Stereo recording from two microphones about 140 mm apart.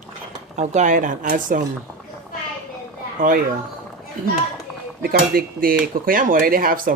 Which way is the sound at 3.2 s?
75° right (ahead or behind).